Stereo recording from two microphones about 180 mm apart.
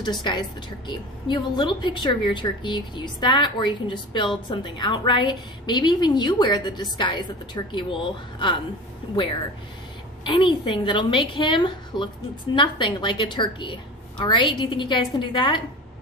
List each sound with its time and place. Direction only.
0.0 s a woman's voice: 25° left (ahead or behind)
10.2 s a woman's voice: 25° left (ahead or behind)